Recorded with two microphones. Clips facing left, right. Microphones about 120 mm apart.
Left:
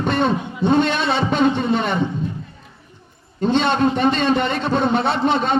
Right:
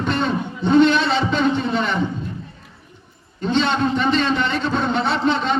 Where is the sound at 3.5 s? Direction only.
55° left (ahead or behind).